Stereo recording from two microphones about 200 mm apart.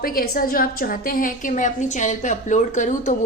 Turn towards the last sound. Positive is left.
turn(degrees=40)  # may be behind; listen again after turning